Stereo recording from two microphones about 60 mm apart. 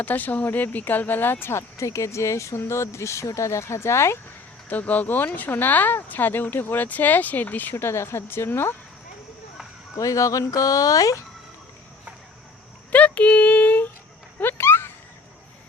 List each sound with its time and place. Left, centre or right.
0.0 s speech: left
4.7 s speech: left
7.8 s speech: left
9.9 s speech: left
12.9 s speech: left
14.6 s a sound: left